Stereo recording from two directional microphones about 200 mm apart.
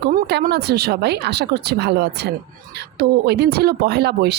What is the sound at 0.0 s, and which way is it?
A woman's voice, 55° right (ahead or behind).